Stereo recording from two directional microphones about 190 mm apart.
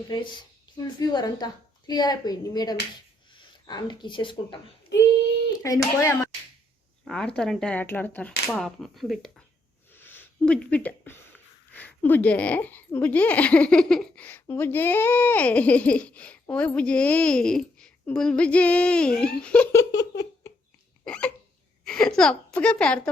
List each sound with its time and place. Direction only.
0.9 s speech: 20° left (ahead or behind)
5.6 s speech: 15° left (ahead or behind)
7.0 s speech: 5° left (ahead or behind)
9.9 s a sound: 10° left (ahead or behind)
11.7 s speech: 10° left (ahead or behind)
21.0 s hiccup: 5° left (ahead or behind)
21.8 s a woman's voice: 5° left (ahead or behind)